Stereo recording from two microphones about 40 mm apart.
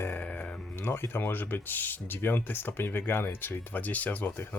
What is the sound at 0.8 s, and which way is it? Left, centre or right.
Speech, left.